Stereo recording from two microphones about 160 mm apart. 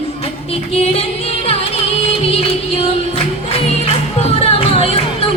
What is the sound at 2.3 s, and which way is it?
Music, 40° left (ahead or behind).